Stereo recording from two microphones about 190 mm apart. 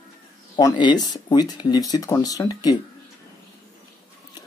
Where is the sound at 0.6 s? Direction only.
20° left (ahead or behind).